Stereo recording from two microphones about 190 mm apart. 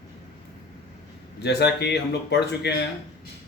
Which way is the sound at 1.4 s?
60° left (ahead or behind).